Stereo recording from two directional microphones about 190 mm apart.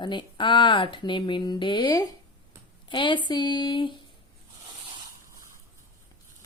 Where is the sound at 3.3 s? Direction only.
20° left (ahead or behind).